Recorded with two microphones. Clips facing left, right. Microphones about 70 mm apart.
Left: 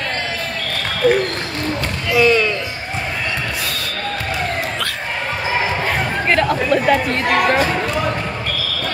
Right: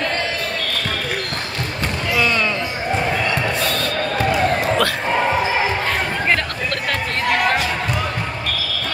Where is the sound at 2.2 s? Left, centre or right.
Centre.